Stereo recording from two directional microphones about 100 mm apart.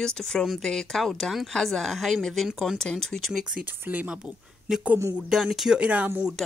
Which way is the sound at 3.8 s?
15° right (ahead or behind).